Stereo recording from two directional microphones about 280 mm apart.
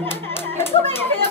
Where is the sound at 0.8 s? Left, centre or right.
Centre.